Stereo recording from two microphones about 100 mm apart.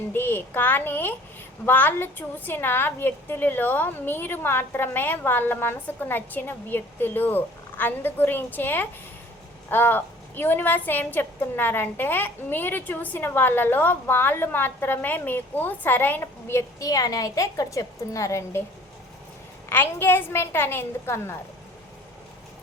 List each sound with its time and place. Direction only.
0.1 s a woman's voice: 20° left (ahead or behind)
19.7 s a woman's voice: 20° left (ahead or behind)